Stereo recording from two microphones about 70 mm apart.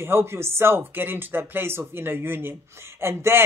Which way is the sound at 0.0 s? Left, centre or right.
Right.